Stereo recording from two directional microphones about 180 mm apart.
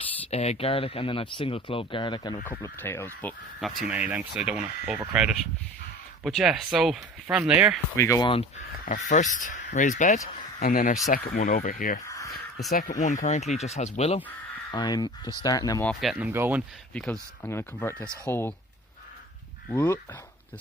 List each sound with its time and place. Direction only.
0.3 s speech: 35° left (ahead or behind)
2.4 s speech: 10° left (ahead or behind)
3.8 s speech: 5° right (ahead or behind)
7.9 s speech: 15° left (ahead or behind)
8.3 s speech: 30° left (ahead or behind)
8.8 s speech: 45° left (ahead or behind)
14.7 s speech: 25° left (ahead or behind)
15.9 s speech: centre (ahead or behind)
16.9 s speech: 5° left (ahead or behind)
19.7 s speech: 10° left (ahead or behind)